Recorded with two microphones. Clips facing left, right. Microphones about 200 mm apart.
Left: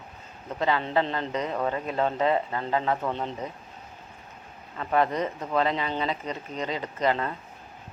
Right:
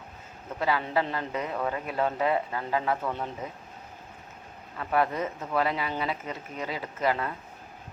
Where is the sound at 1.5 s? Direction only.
25° left (ahead or behind).